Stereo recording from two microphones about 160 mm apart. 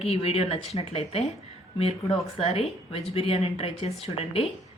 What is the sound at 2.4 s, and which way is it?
Speech, 40° left (ahead or behind).